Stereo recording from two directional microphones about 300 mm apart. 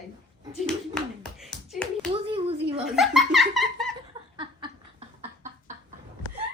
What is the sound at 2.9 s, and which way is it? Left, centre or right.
A woman's voice, centre.